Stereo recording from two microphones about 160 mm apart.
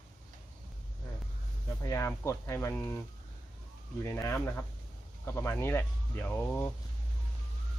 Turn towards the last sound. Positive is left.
turn(degrees=10)  # may be behind; listen again after turning